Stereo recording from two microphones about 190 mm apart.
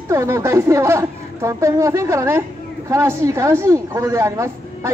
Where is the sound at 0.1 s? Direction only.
15° right (ahead or behind).